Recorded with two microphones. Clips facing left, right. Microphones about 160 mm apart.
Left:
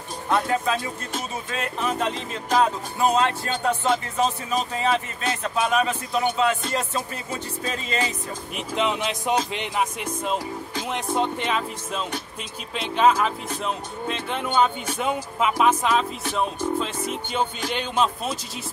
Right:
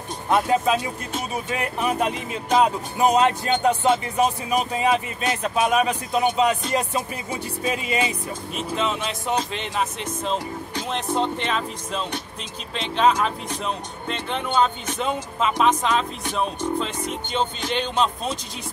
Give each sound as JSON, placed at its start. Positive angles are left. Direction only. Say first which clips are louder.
{"t": 0.3, "sound": "speech", "louder": "right 3 dB", "side_deg": -20}
{"t": 8.5, "sound": "speech", "louder": "left 1 dB", "side_deg": 15}